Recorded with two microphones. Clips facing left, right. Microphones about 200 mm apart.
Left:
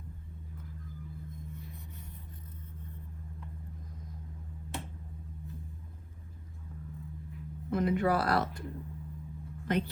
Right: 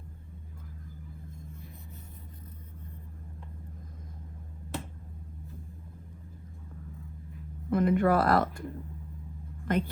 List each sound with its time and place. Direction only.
7.7 s speech: 50° right (ahead or behind)
9.6 s speech: 50° right (ahead or behind)